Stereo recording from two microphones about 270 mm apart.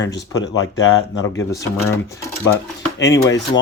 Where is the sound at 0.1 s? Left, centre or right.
Left.